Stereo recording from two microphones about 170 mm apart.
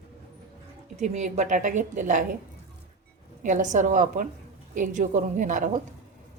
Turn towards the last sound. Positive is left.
turn(degrees=-50)  # may be behind; listen again after turning